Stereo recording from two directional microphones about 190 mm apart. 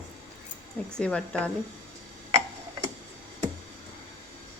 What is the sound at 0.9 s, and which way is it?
Speech, 5° left (ahead or behind).